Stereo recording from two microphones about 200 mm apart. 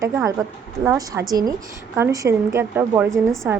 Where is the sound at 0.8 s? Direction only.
15° right (ahead or behind).